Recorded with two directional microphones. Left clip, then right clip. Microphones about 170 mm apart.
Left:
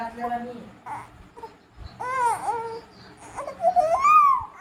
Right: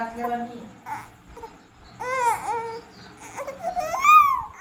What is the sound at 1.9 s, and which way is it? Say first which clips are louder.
Baby cry: right 1 dB; 10° left (ahead or behind).